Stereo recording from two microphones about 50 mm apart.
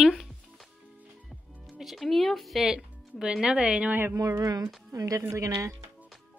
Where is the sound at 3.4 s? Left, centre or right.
Centre.